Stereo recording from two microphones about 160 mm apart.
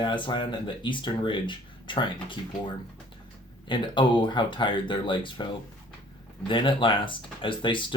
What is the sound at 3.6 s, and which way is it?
Speech, 30° left (ahead or behind).